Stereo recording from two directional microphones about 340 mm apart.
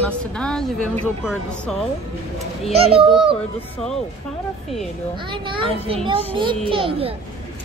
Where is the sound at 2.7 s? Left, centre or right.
Centre.